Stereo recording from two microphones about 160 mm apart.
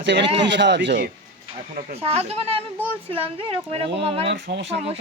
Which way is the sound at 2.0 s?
40° right (ahead or behind).